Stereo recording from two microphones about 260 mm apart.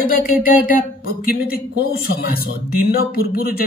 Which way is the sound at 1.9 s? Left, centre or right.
Left.